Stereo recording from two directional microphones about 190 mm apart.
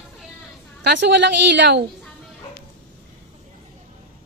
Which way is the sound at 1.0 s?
65° right (ahead or behind).